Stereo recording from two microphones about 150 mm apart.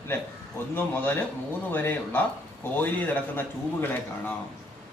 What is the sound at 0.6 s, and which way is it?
Speech, 15° left (ahead or behind).